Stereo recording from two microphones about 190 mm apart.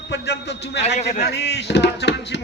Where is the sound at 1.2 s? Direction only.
60° left (ahead or behind).